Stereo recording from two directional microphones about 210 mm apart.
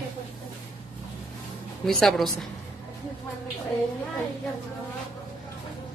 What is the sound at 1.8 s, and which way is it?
Speech, centre (ahead or behind).